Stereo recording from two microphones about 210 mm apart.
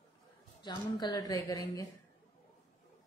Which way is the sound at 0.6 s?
20° left (ahead or behind).